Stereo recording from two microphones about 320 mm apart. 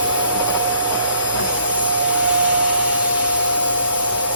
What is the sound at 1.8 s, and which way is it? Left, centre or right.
Vacuum cleaner, right.